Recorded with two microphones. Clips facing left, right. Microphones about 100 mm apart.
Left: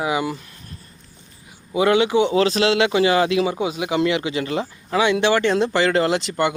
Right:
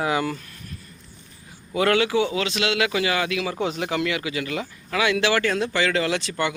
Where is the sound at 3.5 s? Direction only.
10° left (ahead or behind).